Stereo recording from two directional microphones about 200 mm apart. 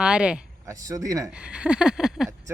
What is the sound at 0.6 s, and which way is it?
Speech, 15° right (ahead or behind).